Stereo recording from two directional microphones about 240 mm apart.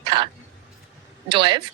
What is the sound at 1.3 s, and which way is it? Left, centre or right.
Speech, centre.